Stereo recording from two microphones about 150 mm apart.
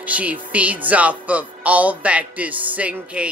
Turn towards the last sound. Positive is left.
turn(degrees=-10)  # may be behind; listen again after turning